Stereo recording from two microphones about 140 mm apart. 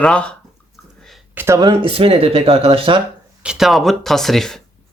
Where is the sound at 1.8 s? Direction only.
40° right (ahead or behind).